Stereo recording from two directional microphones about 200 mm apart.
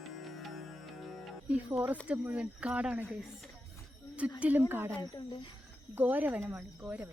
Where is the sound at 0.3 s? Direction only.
Centre (ahead or behind).